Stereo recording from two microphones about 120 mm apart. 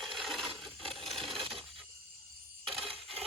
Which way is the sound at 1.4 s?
50° right (ahead or behind).